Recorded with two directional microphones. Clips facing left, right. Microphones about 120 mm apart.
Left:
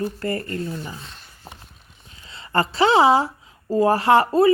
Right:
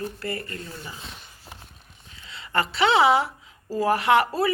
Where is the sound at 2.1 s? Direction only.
35° left (ahead or behind).